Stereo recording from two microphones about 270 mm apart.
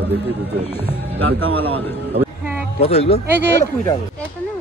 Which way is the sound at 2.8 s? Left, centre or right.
Left.